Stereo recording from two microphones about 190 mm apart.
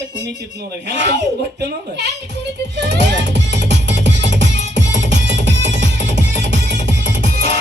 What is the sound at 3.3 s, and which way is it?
Music, 65° right (ahead or behind).